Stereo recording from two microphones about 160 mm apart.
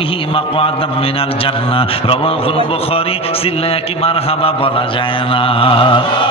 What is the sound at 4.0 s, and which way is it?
A man's voice, 35° left (ahead or behind).